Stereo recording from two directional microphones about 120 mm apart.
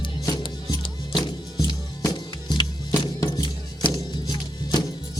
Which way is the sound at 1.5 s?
30° left (ahead or behind).